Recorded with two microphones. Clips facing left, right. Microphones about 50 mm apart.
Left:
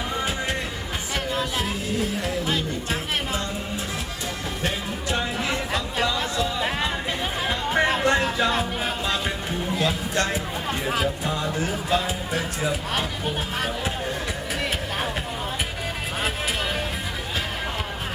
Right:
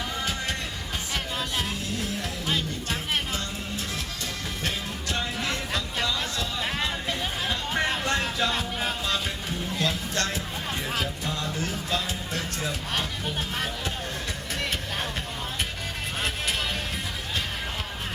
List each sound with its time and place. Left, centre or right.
1.1 s music: centre
5.1 s chatter: centre
9.7 s music: centre